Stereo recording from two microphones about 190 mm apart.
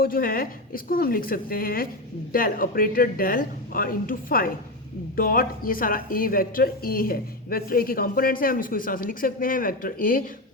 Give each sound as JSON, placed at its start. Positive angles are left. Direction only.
{"t": 0.0, "sound": "speech", "side_deg": 50}